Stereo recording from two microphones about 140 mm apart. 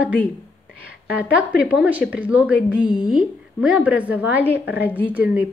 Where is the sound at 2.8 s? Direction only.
30° left (ahead or behind).